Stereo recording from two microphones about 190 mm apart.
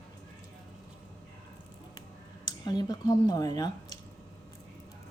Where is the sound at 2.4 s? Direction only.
20° left (ahead or behind).